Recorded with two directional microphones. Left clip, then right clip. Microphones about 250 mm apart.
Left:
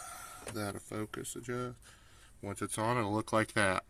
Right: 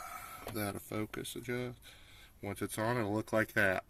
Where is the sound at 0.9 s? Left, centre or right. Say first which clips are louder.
Right 1 dB; centre.